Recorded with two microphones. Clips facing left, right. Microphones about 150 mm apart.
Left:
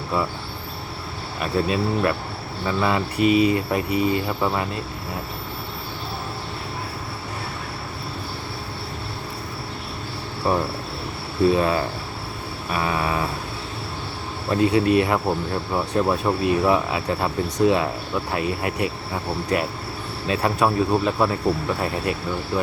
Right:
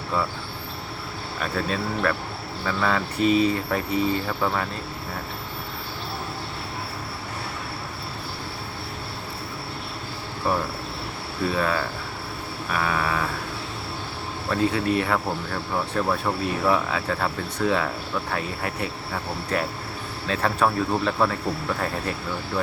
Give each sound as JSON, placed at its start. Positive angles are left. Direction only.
{"t": 1.4, "sound": "speech", "side_deg": 15}
{"t": 10.5, "sound": "speech", "side_deg": 20}
{"t": 14.5, "sound": "speech", "side_deg": 20}
{"t": 22.5, "sound": "speech", "side_deg": 10}